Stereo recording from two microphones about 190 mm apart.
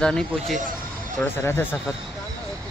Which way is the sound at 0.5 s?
45° right (ahead or behind).